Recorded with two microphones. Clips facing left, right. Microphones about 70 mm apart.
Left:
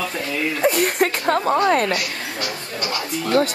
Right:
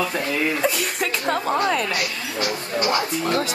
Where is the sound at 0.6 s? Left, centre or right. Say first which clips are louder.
Left 5 dB; left.